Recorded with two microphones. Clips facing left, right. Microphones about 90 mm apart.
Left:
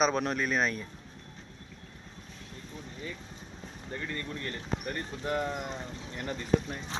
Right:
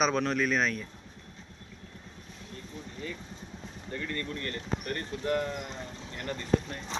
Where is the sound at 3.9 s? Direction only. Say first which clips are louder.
Right 2 dB; 15° left (ahead or behind).